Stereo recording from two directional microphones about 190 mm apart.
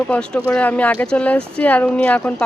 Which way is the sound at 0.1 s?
5° left (ahead or behind).